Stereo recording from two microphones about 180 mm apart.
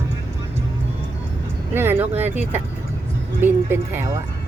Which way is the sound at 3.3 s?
15° right (ahead or behind).